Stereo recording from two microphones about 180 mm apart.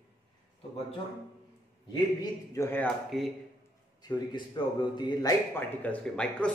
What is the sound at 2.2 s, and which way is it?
Speech, 15° left (ahead or behind).